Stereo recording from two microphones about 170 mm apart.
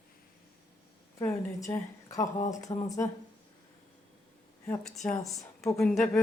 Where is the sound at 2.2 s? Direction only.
45° left (ahead or behind).